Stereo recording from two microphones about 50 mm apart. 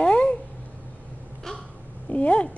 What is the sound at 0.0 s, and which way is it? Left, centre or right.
Cat, left.